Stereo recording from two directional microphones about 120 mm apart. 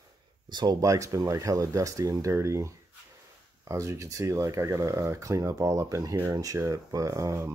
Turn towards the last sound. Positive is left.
turn(degrees=-25)  # may be behind; listen again after turning